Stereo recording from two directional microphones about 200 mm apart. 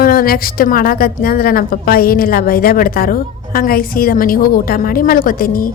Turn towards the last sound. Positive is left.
turn(degrees=45)  # may be behind; listen again after turning